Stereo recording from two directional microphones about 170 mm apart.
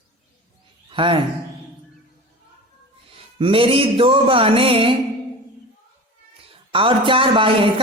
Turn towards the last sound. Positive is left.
turn(degrees=-30)  # may be behind; listen again after turning